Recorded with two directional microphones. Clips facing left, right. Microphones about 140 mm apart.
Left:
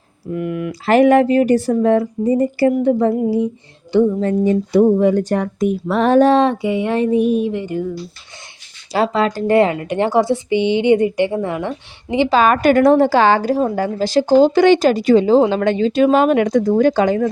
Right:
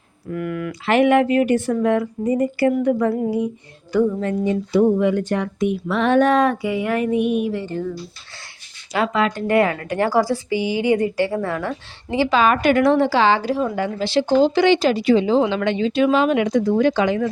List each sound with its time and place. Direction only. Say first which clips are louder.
0.3 s a sound: left 3 dB; 25° left (ahead or behind)
0.7 s speech: left 4 dB; 40° left (ahead or behind)
7.5 s speech: left 3 dB; 15° left (ahead or behind)
8.9 s a woman's voice: left 3 dB; 35° left (ahead or behind); by 11.8 s 20° left (ahead or behind)
12.3 s a woman's voice: left 3 dB; 45° left (ahead or behind)